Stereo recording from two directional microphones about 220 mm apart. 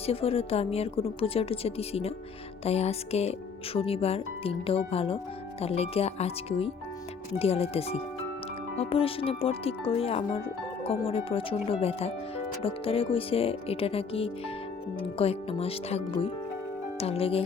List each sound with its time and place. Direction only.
0.0 s speech: 25° left (ahead or behind)